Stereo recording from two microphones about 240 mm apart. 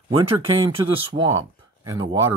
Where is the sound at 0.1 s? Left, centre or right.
Centre.